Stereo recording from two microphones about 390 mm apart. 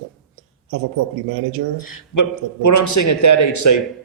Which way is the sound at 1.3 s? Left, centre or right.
Right.